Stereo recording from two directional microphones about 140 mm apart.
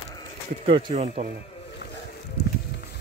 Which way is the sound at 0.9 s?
50° right (ahead or behind).